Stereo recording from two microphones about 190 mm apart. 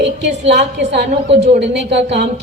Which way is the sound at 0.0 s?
65° right (ahead or behind).